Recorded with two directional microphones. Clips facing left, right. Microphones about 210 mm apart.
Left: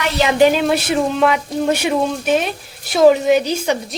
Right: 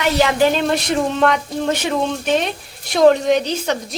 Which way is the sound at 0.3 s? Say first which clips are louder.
Left 3 dB; 15° left (ahead or behind).